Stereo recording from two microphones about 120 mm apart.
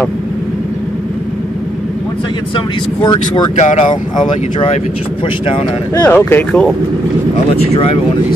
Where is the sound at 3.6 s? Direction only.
75° left (ahead or behind).